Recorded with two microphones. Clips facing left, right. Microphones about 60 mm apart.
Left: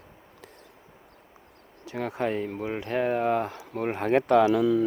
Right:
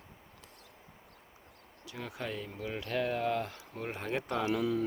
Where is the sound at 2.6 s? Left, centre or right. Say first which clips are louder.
Left 4 dB; left.